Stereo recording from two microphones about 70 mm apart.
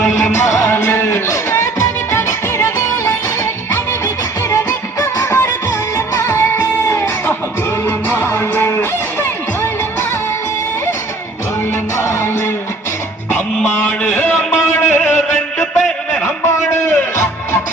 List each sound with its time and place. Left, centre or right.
0.0 s music: left
5.1 s music: left
11.9 s music: left
13.7 s music: left
15.5 s a sound: centre
16.2 s music: left